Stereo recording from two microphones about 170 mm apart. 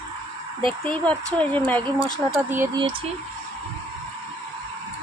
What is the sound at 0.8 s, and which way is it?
Speech, 5° left (ahead or behind).